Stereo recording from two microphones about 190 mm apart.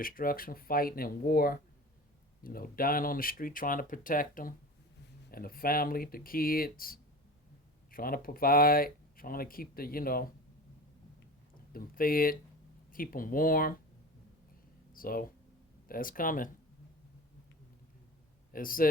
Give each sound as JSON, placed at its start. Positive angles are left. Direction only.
{"t": 0.0, "sound": "speech", "side_deg": 50}
{"t": 11.7, "sound": "speech", "side_deg": 50}
{"t": 14.9, "sound": "speech", "side_deg": 50}
{"t": 18.5, "sound": "speech", "side_deg": 50}